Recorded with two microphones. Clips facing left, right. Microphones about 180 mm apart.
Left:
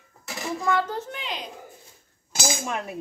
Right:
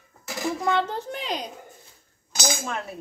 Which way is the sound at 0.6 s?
25° right (ahead or behind).